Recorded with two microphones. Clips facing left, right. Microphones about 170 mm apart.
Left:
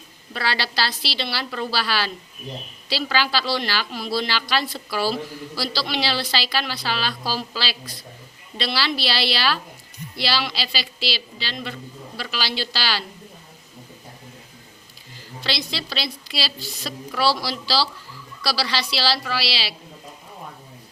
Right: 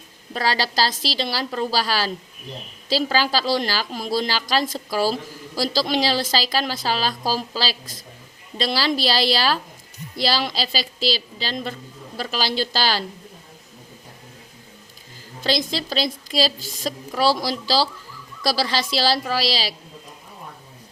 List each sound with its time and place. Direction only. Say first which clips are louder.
0.3 s a woman's voice: right 3 dB; 40° right (ahead or behind)
15.4 s a woman's voice: right 5 dB; 45° right (ahead or behind)